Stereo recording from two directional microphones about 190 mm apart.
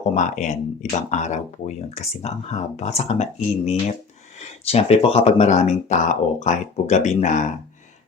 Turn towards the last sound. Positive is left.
turn(degrees=40)  # may be behind; listen again after turning